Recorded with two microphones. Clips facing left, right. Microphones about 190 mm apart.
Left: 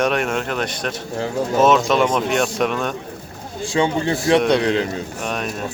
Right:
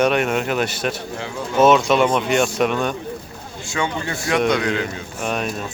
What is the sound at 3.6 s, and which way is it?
Speech, 30° left (ahead or behind).